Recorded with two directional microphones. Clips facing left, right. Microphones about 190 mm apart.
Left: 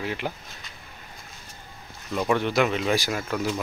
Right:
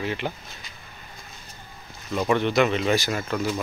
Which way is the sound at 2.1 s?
Centre (ahead or behind).